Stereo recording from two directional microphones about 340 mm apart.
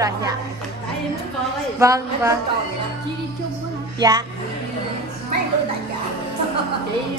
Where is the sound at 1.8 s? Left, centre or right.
Centre.